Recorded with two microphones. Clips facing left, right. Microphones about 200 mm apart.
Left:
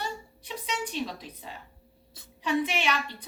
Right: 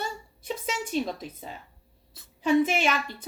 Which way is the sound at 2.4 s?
45° right (ahead or behind).